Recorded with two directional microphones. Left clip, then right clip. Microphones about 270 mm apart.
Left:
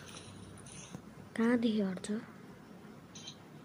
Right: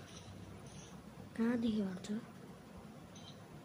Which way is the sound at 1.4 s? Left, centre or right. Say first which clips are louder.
Left 6 dB; centre.